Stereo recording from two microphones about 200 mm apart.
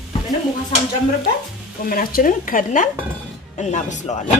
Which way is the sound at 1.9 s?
45° left (ahead or behind).